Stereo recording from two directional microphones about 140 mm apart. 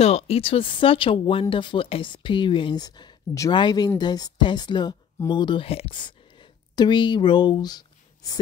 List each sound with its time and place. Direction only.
0.0 s speech: 45° left (ahead or behind); by 8.4 s 30° left (ahead or behind)